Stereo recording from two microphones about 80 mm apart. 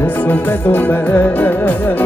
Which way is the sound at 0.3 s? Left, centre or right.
Left.